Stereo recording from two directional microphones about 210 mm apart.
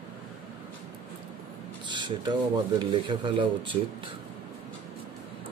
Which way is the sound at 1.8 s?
20° right (ahead or behind).